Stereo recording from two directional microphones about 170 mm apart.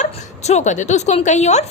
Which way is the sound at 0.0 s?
45° left (ahead or behind).